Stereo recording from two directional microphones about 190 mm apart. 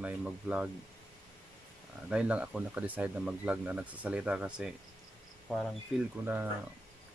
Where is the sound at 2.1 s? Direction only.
5° right (ahead or behind).